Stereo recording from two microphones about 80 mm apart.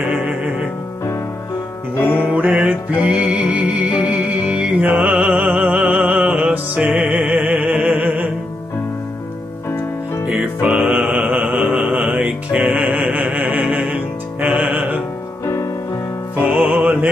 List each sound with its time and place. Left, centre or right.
0.1 s music: right
2.0 s music: left
2.2 s music: centre
4.8 s music: right
10.2 s music: centre
16.3 s music: right